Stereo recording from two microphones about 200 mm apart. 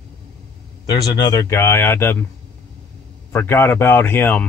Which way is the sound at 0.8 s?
20° left (ahead or behind).